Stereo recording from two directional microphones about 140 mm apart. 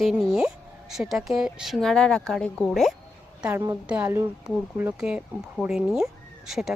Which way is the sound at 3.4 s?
20° right (ahead or behind).